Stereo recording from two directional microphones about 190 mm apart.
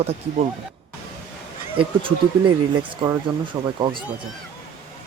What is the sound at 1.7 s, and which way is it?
Speech, 30° right (ahead or behind).